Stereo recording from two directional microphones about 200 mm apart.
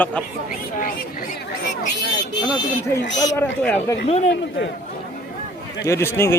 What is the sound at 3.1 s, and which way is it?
Speech, 10° left (ahead or behind).